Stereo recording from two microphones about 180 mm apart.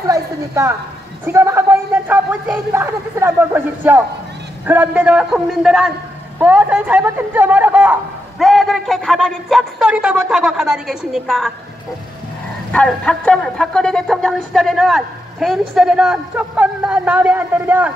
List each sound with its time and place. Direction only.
0.0 s a man's voice: 15° right (ahead or behind); by 11.5 s centre (ahead or behind)
12.7 s a man's voice: 5° left (ahead or behind)